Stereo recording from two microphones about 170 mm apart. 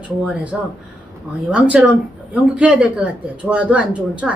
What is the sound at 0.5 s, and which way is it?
A woman's voice, 5° right (ahead or behind).